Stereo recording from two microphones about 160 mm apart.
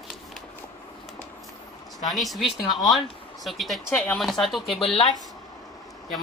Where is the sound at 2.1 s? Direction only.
Centre (ahead or behind).